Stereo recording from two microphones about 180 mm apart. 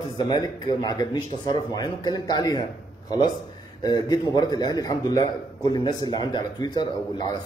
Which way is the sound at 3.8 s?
20° left (ahead or behind).